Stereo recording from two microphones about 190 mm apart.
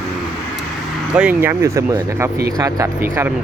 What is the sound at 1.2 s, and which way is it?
Speech, 10° right (ahead or behind).